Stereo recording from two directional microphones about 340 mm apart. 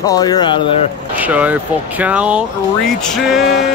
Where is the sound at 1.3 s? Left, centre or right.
Centre.